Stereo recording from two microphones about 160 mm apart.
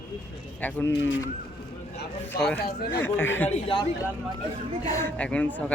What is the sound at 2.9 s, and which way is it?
Speech, 15° left (ahead or behind).